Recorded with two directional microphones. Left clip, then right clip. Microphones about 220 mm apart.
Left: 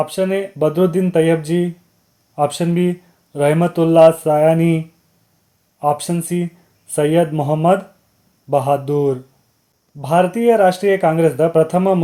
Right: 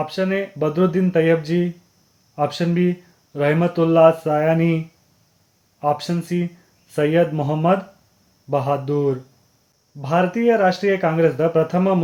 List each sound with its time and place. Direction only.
0.0 s speech: 20° left (ahead or behind)
5.8 s speech: 20° left (ahead or behind)